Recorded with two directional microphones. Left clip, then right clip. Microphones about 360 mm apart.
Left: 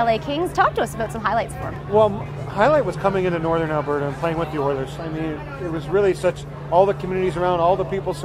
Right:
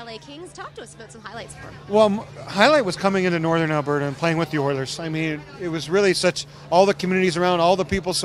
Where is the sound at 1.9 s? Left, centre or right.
Right.